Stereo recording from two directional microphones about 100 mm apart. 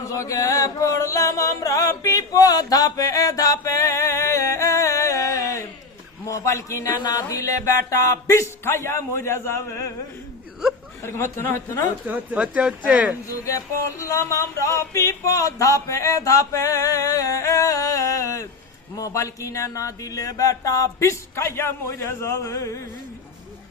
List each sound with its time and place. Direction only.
0.0 s chant: 35° left (ahead or behind)
6.2 s a sound: 30° left (ahead or behind)
7.0 s music: 35° left (ahead or behind)
11.0 s music: 25° left (ahead or behind)
12.0 s speech: 15° right (ahead or behind)
14.0 s a sound: 30° left (ahead or behind)